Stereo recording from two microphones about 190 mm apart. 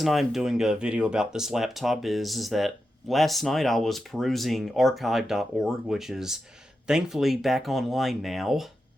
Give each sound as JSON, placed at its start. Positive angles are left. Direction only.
{"t": 0.0, "sound": "speech", "side_deg": 0}